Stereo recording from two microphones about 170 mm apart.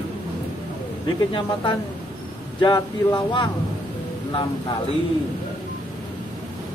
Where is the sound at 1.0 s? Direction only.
30° left (ahead or behind).